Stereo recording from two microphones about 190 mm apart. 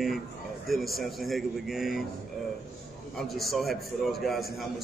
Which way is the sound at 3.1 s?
Centre (ahead or behind).